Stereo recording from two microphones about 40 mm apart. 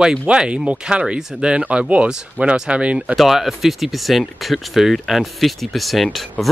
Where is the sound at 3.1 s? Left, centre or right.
Centre.